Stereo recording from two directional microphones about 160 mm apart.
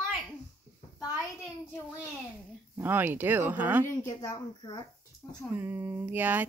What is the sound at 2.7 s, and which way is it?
Speech, 10° right (ahead or behind).